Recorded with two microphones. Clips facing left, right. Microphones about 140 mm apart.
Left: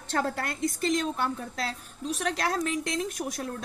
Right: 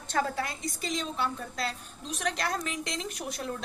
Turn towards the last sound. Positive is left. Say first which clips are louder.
# left 5 dB
turn(degrees=45)  # may be behind; listen again after turning